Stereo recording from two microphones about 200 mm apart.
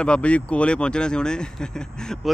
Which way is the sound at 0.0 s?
5° left (ahead or behind).